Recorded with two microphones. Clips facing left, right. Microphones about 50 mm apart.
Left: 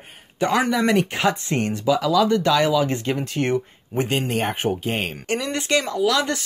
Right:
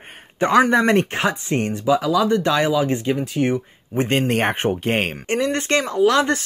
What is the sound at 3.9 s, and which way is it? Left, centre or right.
Speech, right.